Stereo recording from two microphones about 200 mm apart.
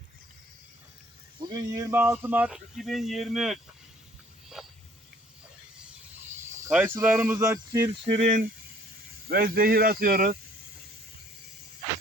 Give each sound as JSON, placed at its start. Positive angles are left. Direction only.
{"t": 1.4, "sound": "speech", "side_deg": -20}
{"t": 4.6, "sound": "a sound", "side_deg": 0}
{"t": 6.7, "sound": "speech", "side_deg": -10}
{"t": 8.0, "sound": "speech", "side_deg": -35}
{"t": 9.3, "sound": "speech", "side_deg": -50}